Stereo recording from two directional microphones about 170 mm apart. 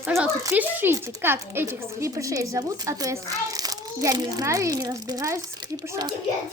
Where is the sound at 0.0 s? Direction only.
15° right (ahead or behind).